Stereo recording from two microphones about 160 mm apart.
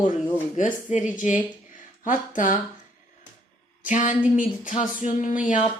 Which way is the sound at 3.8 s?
55° left (ahead or behind).